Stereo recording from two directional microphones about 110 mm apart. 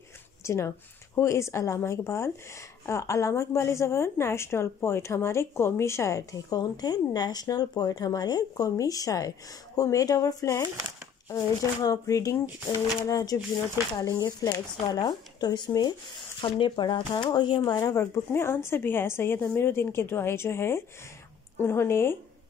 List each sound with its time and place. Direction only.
0.4 s speech: 25° left (ahead or behind)
16.3 s speech: 50° left (ahead or behind); by 22.1 s 20° left (ahead or behind)